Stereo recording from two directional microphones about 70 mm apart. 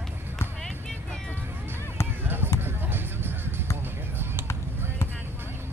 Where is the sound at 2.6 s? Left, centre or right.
Right.